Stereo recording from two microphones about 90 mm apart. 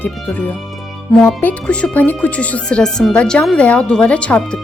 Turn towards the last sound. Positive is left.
turn(degrees=15)  # may be behind; listen again after turning